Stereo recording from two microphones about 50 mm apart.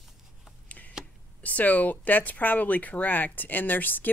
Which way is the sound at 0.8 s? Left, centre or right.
Left.